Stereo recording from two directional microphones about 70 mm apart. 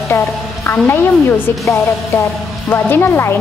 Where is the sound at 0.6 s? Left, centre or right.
Left.